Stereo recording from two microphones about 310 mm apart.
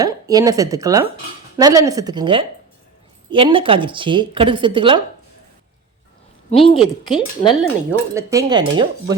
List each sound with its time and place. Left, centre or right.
0.0 s a woman's voice: centre
6.5 s a woman's voice: centre
8.1 s a woman's voice: centre